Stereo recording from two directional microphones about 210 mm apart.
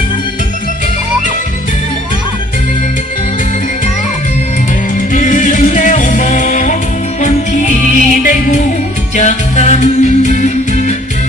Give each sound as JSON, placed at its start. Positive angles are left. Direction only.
{"t": 5.1, "sound": "music", "side_deg": 35}
{"t": 9.1, "sound": "music", "side_deg": 35}